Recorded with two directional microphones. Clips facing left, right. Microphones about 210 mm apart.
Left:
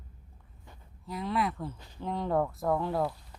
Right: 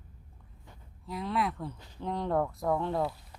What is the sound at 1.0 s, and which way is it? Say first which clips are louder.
Speech: left 1 dB; centre (ahead or behind).